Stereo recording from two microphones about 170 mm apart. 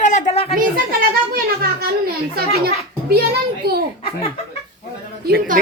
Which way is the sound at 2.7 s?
65° right (ahead or behind).